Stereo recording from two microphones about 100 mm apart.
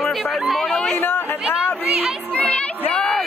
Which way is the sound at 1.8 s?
15° right (ahead or behind).